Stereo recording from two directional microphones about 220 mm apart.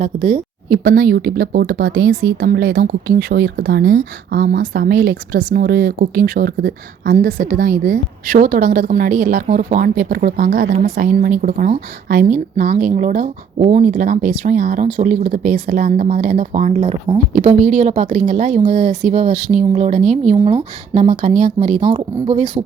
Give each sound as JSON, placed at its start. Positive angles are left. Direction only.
{"t": 0.0, "sound": "speech", "side_deg": -35}
{"t": 21.8, "sound": "speech", "side_deg": -20}